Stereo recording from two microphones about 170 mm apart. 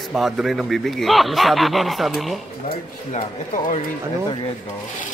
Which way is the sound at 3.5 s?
50° left (ahead or behind).